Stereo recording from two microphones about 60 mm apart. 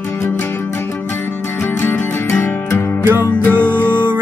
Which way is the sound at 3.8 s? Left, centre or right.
Right.